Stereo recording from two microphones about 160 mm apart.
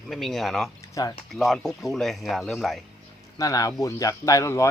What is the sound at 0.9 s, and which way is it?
Speech, 20° left (ahead or behind).